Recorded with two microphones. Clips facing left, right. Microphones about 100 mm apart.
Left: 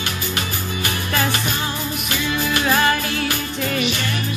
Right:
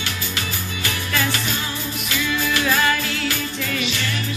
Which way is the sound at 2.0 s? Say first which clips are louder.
Even; 45° left (ahead or behind).